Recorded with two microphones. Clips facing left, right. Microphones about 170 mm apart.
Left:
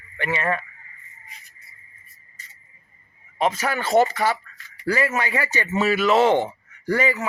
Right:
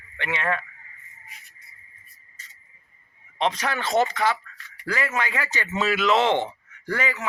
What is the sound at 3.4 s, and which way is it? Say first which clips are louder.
Speech: left 2 dB; 5° left (ahead or behind).